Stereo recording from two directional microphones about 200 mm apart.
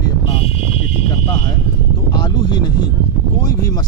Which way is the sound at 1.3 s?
20° left (ahead or behind).